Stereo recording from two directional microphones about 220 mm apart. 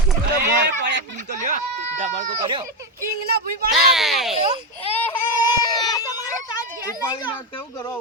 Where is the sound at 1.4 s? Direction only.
35° right (ahead or behind).